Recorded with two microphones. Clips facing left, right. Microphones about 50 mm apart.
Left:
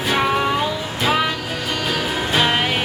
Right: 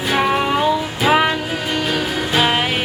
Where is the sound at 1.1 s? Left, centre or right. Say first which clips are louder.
Right 5 dB; right.